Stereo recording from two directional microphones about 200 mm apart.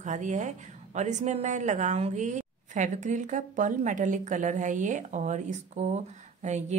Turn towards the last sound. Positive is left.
turn(degrees=-35)  # may be behind; listen again after turning